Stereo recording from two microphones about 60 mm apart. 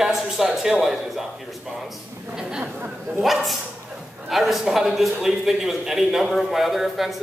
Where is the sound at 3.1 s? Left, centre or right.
Centre.